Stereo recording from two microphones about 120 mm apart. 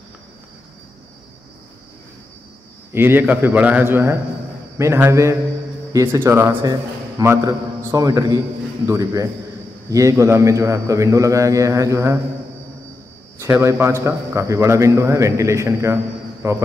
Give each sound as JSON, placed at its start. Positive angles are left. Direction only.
{"t": 2.9, "sound": "a man's voice", "side_deg": -20}
{"t": 13.4, "sound": "a man's voice", "side_deg": -25}